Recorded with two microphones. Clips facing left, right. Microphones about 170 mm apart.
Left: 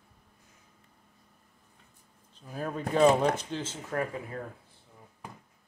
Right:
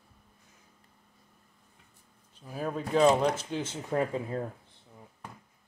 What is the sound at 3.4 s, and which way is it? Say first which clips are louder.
Speech: right 2 dB; 10° right (ahead or behind).